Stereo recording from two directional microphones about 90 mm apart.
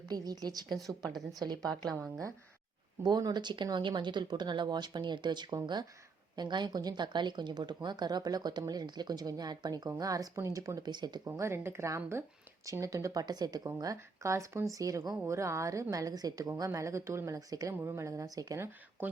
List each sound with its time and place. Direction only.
0.1 s speech: 50° right (ahead or behind)
3.0 s a woman's voice: 50° right (ahead or behind)
10.8 s speech: 55° right (ahead or behind)
11.3 s a woman's voice: 30° right (ahead or behind); by 15.2 s 45° right (ahead or behind)
15.3 s a woman's voice: 35° right (ahead or behind)
19.0 s speech: 20° right (ahead or behind)